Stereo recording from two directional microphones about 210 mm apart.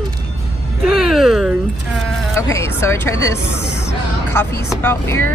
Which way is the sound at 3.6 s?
55° left (ahead or behind).